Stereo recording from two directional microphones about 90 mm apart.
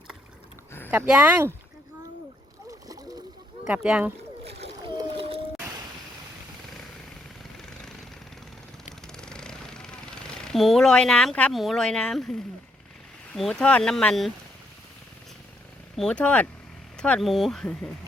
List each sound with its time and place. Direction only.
1.0 s speech: 10° right (ahead or behind)
3.7 s speech: 15° right (ahead or behind)
4.8 s boat: 60° right (ahead or behind); by 5.4 s 80° right
7.5 s vehicle: 5° left (ahead or behind)
9.1 s a sound: 10° left (ahead or behind)
11.5 s speech: centre (ahead or behind)
16.0 s speech: 10° left (ahead or behind)